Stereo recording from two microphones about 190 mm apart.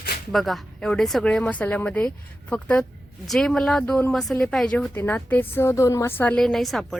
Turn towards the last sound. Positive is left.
turn(degrees=0)  # may be behind; listen again after turning